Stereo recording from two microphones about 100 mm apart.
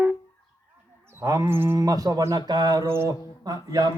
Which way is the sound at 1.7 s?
35° right (ahead or behind).